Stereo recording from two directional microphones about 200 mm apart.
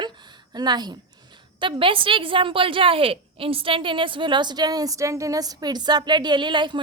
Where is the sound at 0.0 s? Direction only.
20° right (ahead or behind).